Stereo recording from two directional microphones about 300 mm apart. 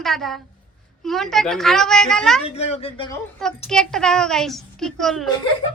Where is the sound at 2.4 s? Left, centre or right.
Centre.